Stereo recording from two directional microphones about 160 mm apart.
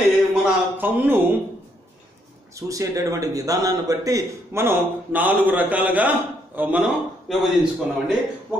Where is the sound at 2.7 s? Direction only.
20° right (ahead or behind); by 7.4 s centre (ahead or behind).